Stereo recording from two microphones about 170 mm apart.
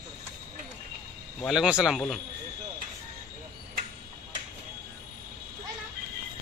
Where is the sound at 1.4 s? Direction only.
5° right (ahead or behind).